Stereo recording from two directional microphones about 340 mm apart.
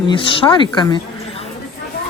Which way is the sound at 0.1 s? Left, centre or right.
Centre.